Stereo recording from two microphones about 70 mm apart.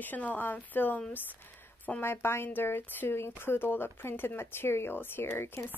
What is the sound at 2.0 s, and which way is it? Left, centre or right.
Speech, left.